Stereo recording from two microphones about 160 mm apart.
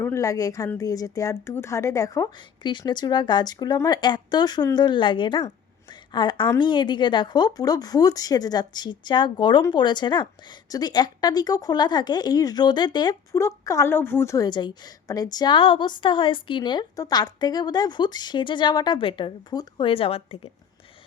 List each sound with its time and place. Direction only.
0.0 s a woman's voice: 20° left (ahead or behind)
5.9 s a sound: 30° left (ahead or behind)
6.6 s a woman's voice: 30° left (ahead or behind)